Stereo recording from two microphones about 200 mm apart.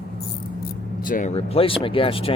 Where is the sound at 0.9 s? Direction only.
45° left (ahead or behind).